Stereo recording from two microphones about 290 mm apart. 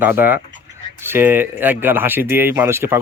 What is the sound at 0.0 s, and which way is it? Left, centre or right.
Speech, centre.